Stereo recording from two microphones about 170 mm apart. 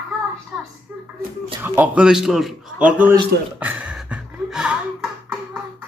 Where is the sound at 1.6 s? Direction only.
10° right (ahead or behind).